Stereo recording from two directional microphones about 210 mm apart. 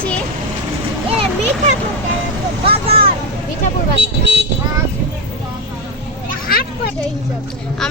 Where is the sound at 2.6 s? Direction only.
25° right (ahead or behind).